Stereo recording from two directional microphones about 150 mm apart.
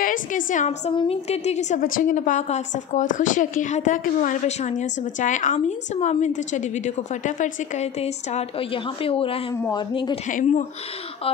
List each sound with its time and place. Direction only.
0.0 s a woman's voice: 65° left (ahead or behind); by 10.1 s 30° left (ahead or behind)
10.2 s a woman's voice: 50° left (ahead or behind)